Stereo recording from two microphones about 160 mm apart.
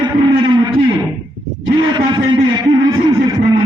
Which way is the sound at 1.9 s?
25° right (ahead or behind).